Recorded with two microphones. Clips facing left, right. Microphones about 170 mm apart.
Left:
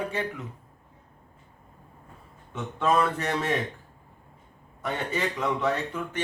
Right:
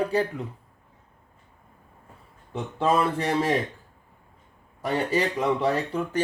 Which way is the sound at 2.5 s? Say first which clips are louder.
Right 2 dB; 30° right (ahead or behind).